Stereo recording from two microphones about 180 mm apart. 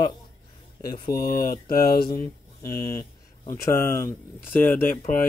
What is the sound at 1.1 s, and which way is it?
Speech, 55° left (ahead or behind).